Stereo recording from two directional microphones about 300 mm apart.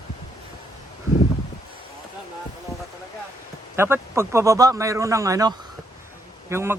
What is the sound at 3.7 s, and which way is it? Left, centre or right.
A man's voice, centre.